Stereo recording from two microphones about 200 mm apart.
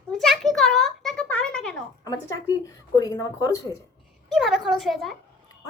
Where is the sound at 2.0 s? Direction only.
20° left (ahead or behind).